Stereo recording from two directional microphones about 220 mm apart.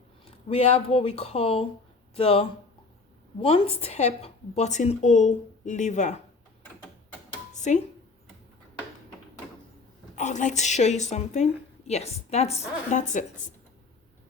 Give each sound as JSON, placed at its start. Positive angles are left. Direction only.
{"t": 0.4, "sound": "a woman's voice", "side_deg": 30}
{"t": 7.5, "sound": "music", "side_deg": 35}
{"t": 10.2, "sound": "a woman's voice", "side_deg": 35}